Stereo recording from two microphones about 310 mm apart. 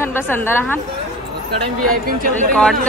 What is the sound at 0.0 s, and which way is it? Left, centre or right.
Speech, centre.